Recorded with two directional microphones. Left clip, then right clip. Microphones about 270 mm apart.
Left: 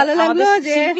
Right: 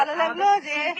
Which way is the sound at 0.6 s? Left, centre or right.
Left.